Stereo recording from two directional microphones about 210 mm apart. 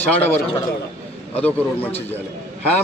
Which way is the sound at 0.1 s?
10° left (ahead or behind).